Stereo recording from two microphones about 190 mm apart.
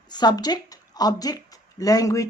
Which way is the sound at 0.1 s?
20° left (ahead or behind).